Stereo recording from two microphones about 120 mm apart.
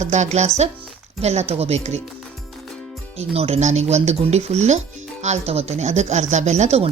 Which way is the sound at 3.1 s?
55° right (ahead or behind).